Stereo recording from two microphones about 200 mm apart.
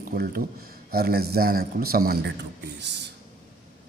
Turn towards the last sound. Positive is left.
turn(degrees=-60)  # may be behind; listen again after turning